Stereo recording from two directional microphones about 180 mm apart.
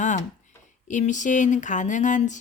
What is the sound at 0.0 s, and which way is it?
Speech, 45° left (ahead or behind).